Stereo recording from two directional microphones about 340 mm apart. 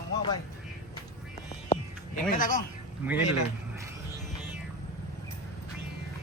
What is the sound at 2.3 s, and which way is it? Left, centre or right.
Speech, left.